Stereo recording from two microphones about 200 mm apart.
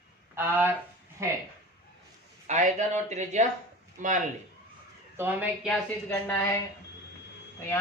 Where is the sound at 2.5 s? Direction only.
35° right (ahead or behind).